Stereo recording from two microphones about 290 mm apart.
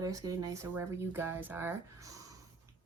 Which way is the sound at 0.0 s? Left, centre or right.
Centre.